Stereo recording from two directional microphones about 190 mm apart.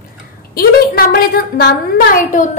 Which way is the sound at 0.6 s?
55° left (ahead or behind).